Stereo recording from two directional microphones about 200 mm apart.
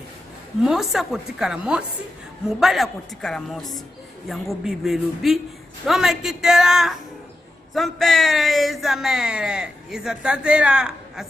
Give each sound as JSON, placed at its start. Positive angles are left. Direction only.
{"t": 0.7, "sound": "speech", "side_deg": 0}